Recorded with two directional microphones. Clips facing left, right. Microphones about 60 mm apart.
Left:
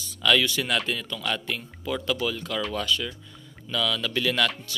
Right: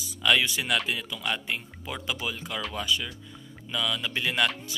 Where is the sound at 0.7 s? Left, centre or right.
Centre.